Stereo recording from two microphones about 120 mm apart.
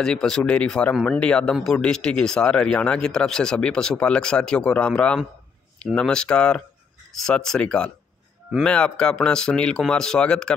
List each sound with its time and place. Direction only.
0.0 s speech: 5° left (ahead or behind)